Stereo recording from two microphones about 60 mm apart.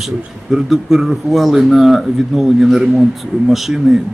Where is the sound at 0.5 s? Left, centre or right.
Centre.